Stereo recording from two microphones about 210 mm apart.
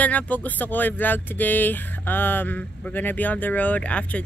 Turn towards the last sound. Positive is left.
turn(degrees=5)  # may be behind; listen again after turning